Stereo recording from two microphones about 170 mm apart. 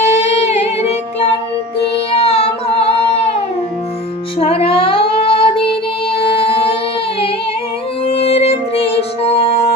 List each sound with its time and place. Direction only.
0.0 s music: 40° left (ahead or behind)
2.2 s carnatic music: 35° left (ahead or behind)
4.4 s child singing: 35° left (ahead or behind)
6.1 s music: 35° left (ahead or behind)
8.0 s music: 35° left (ahead or behind)